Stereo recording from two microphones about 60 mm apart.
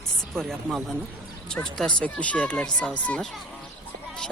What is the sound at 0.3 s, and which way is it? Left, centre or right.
Speech, centre.